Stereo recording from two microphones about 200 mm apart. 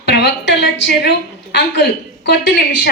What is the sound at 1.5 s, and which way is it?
A woman's voice, 55° left (ahead or behind).